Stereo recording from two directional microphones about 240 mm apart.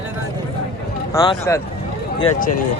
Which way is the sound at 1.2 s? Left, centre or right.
Centre.